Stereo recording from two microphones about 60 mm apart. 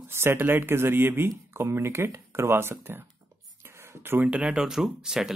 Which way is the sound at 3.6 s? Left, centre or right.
Right.